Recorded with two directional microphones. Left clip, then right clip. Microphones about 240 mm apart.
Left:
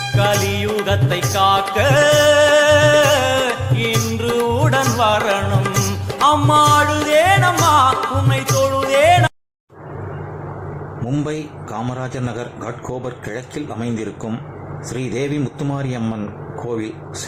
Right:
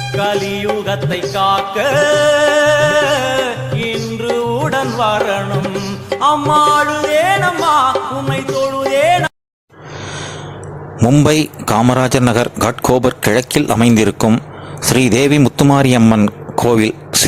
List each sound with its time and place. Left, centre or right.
0.0 s music: centre
11.3 s a man's voice: right